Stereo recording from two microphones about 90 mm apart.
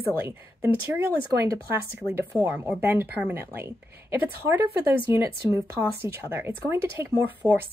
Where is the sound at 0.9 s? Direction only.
35° right (ahead or behind).